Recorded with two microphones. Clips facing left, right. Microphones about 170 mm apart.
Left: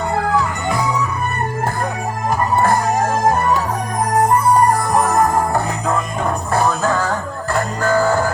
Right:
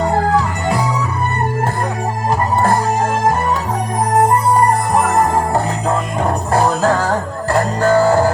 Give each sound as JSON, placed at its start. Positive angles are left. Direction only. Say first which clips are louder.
{"t": 5.1, "sound": "music", "louder": "right 1 dB", "side_deg": -30}